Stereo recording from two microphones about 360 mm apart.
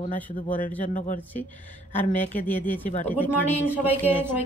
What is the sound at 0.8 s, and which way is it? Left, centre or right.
Speech, left.